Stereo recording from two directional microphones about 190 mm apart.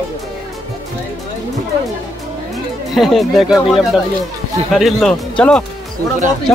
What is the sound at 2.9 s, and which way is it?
Speech, centre (ahead or behind).